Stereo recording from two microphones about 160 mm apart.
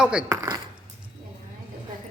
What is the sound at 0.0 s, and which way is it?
Speech, 5° right (ahead or behind).